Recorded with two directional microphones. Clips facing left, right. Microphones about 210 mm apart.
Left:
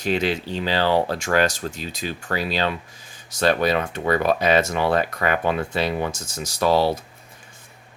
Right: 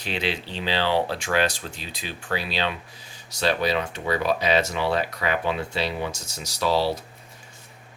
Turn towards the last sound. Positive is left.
turn(degrees=50)  # may be behind; listen again after turning